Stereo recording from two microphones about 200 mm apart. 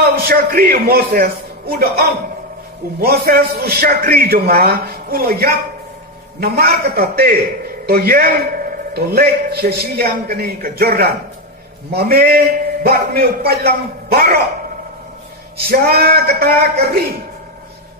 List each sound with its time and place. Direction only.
0.0 s a man's voice: 50° right (ahead or behind)
15.5 s a man's voice: 50° right (ahead or behind)